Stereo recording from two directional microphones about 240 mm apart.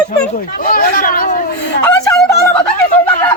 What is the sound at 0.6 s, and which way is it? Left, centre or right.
Hubbub, left.